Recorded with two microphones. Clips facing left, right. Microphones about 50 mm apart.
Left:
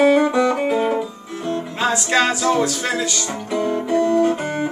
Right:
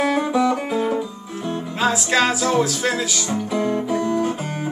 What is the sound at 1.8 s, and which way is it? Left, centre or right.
Music, centre.